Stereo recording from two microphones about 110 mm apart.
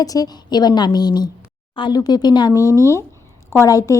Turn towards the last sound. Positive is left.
turn(degrees=30)  # may be behind; listen again after turning